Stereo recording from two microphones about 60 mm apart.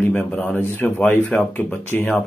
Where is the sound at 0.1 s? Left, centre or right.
Left.